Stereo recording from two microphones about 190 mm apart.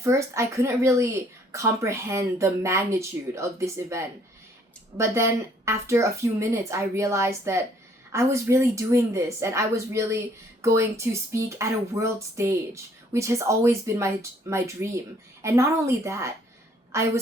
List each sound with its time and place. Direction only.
0.0 s speech: 15° right (ahead or behind)